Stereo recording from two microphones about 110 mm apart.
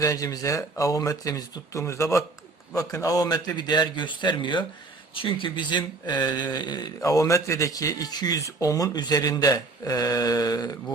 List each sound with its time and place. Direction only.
0.0 s speech: 30° left (ahead or behind)